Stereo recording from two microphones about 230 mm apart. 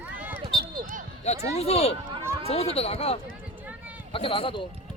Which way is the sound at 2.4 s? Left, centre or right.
Left.